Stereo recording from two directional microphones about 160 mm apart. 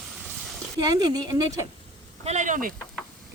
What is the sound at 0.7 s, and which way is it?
Speech, 25° right (ahead or behind).